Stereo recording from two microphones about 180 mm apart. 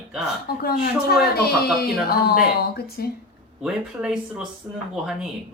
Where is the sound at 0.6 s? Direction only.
55° left (ahead or behind).